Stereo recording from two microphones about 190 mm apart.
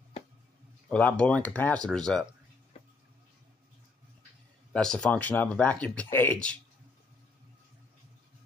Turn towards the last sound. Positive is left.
turn(degrees=5)  # may be behind; listen again after turning